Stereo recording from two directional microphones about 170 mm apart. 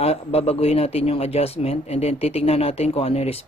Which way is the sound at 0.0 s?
35° left (ahead or behind).